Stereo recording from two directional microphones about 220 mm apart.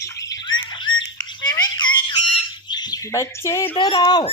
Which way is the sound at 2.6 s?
20° left (ahead or behind).